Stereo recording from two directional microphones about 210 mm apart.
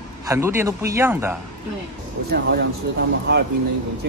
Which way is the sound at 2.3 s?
50° right (ahead or behind).